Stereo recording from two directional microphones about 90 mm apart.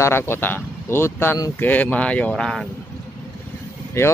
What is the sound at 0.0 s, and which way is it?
Speech, 25° left (ahead or behind).